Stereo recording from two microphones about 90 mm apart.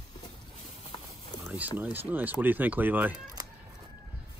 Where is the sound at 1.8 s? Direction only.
20° right (ahead or behind).